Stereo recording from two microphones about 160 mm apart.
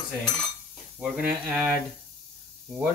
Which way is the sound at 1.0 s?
5° right (ahead or behind).